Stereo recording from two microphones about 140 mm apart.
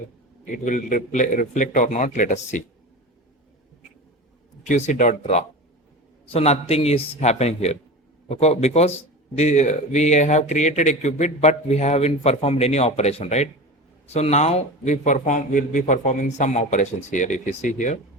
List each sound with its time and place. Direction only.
0.5 s a man's voice: 65° left (ahead or behind)
4.6 s a man's voice: 60° left (ahead or behind)